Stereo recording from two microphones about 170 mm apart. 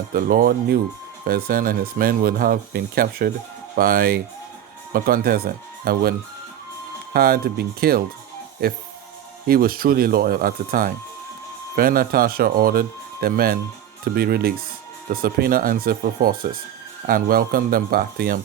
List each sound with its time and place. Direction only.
0.1 s speech: 55° right (ahead or behind)